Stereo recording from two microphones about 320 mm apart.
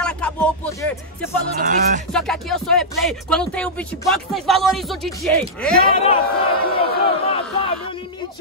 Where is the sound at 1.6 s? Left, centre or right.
Right.